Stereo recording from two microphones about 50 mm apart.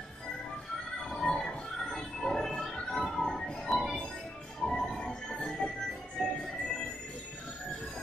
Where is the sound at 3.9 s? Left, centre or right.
Centre.